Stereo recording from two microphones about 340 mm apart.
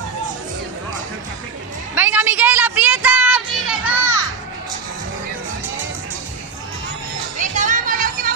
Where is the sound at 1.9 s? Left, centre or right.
Centre.